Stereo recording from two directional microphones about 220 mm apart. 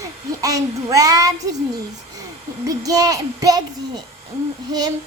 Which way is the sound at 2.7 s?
15° right (ahead or behind).